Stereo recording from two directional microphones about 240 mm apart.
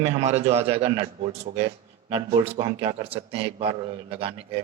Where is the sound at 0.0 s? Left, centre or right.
Right.